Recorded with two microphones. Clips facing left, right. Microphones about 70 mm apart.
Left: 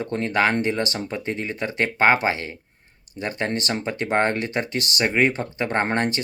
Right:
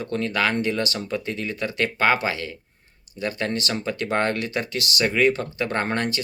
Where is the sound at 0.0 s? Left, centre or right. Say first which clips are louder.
Left 2 dB; left.